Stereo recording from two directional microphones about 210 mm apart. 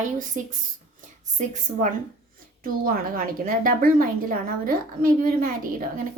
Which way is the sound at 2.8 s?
45° right (ahead or behind).